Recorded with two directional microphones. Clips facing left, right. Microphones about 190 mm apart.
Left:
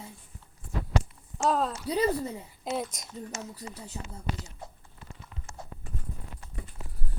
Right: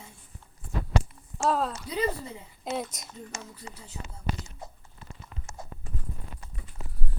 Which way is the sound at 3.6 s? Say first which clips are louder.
Left 3 dB; 40° left (ahead or behind).